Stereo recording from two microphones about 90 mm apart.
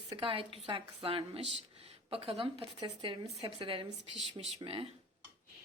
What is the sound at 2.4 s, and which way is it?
A woman's voice, 75° right (ahead or behind).